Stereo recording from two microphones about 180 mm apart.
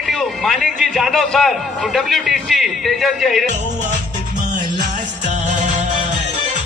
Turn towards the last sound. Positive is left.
turn(degrees=-40)  # may be behind; listen again after turning